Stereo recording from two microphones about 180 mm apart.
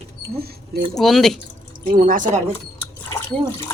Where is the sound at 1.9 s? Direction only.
50° right (ahead or behind).